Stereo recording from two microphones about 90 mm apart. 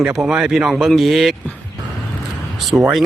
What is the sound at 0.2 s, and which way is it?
Speech, 5° right (ahead or behind).